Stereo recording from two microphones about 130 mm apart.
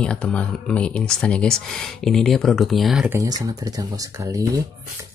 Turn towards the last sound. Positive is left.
turn(degrees=-25)  # may be behind; listen again after turning